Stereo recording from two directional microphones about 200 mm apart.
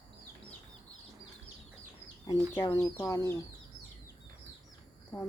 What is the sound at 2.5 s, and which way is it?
Speech, 20° left (ahead or behind).